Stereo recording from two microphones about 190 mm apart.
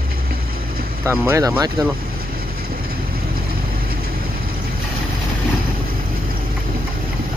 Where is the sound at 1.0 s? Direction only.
15° right (ahead or behind).